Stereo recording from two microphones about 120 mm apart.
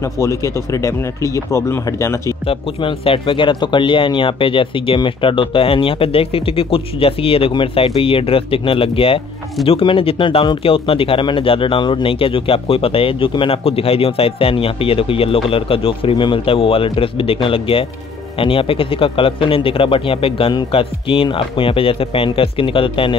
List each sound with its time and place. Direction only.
0.0 s speech: 25° left (ahead or behind)
2.4 s speech: 50° left (ahead or behind)